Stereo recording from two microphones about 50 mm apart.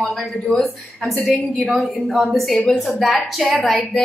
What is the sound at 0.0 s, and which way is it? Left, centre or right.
Speech, centre.